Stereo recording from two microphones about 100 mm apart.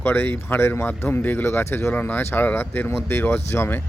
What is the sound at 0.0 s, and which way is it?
Speech, 20° left (ahead or behind).